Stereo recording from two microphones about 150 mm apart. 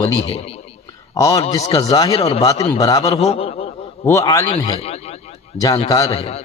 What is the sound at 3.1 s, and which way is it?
Speech, 40° left (ahead or behind).